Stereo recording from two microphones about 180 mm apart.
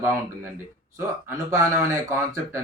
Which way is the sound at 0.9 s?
15° right (ahead or behind).